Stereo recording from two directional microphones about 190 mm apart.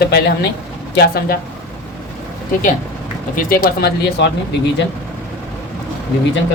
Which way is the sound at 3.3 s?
50° left (ahead or behind).